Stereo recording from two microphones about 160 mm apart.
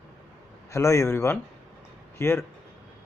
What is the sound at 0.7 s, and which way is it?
Speech, 20° left (ahead or behind).